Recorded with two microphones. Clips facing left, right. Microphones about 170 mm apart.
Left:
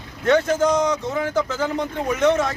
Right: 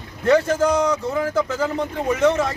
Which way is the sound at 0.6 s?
10° right (ahead or behind).